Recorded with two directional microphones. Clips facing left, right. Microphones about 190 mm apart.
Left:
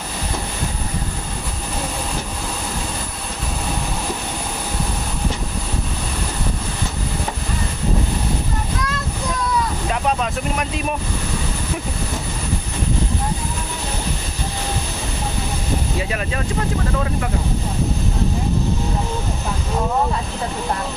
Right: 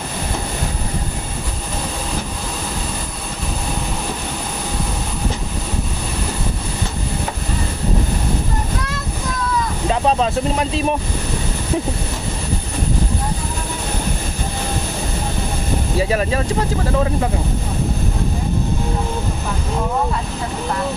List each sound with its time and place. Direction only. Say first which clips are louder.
9.8 s speech: right 4 dB; 30° right (ahead or behind)
16.0 s speech: right 6 dB; 35° right (ahead or behind)